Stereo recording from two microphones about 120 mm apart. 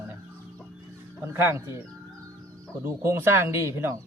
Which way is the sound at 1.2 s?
20° right (ahead or behind).